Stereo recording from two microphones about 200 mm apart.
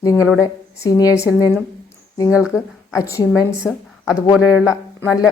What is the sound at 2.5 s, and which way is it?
A woman's voice, 15° left (ahead or behind).